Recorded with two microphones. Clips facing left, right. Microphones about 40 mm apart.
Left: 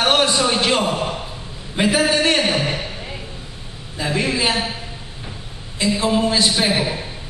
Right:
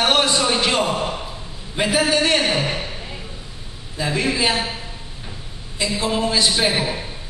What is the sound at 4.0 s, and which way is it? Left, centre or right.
Speech, centre.